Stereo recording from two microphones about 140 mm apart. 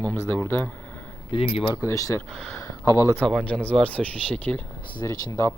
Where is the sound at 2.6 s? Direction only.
20° left (ahead or behind).